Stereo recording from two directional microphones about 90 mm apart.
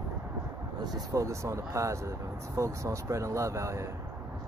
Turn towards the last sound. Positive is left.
turn(degrees=-35)  # may be behind; listen again after turning